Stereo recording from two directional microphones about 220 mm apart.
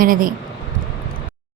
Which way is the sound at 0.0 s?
40° right (ahead or behind).